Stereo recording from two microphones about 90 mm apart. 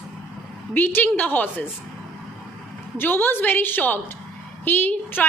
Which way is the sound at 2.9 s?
25° left (ahead or behind).